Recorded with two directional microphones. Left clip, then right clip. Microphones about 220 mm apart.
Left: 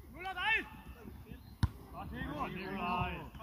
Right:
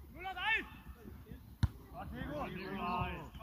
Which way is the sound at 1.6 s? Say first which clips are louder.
Left 2 dB; 5° left (ahead or behind).